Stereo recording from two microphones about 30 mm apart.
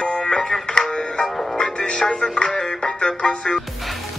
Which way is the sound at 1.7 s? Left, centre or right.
Left.